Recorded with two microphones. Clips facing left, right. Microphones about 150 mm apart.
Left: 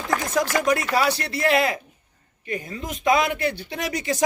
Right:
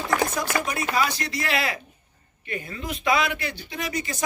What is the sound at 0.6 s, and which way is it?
Speech, 80° left.